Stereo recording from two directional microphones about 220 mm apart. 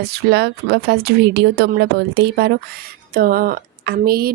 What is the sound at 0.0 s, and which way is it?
Speech, 50° right (ahead or behind).